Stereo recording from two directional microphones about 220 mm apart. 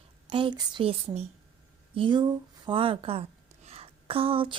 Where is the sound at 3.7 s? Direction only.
25° right (ahead or behind).